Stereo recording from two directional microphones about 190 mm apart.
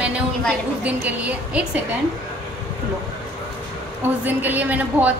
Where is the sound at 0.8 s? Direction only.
5° right (ahead or behind).